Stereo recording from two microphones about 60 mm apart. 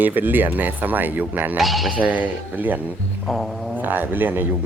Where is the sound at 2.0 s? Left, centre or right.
Right.